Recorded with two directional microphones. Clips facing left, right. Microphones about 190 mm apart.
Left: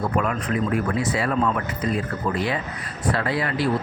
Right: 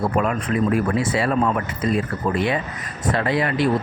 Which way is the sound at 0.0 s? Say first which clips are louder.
Right 3 dB; 30° right (ahead or behind).